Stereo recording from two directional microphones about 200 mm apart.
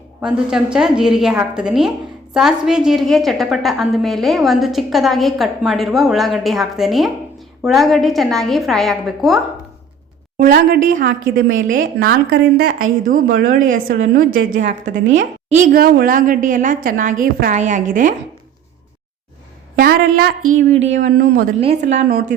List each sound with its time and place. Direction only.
0.2 s a woman's voice: 5° right (ahead or behind)
10.3 s a woman's voice: 45° right (ahead or behind)
19.8 s a woman's voice: 50° right (ahead or behind)
20.6 s a woman's voice: 35° right (ahead or behind)
21.0 s a woman's voice: 45° right (ahead or behind)
21.6 s a woman's voice: 30° right (ahead or behind)